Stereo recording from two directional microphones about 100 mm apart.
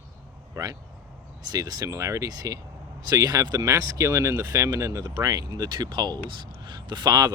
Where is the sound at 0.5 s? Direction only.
35° right (ahead or behind).